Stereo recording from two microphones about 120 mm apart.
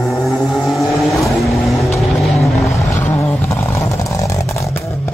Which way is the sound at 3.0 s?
20° left (ahead or behind).